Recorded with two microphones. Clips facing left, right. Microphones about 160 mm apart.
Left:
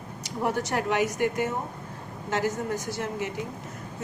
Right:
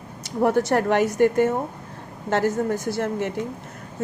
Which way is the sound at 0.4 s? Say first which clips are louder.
Right 8 dB; 50° right (ahead or behind).